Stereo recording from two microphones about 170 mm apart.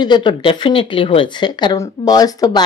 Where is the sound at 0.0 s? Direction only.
25° left (ahead or behind).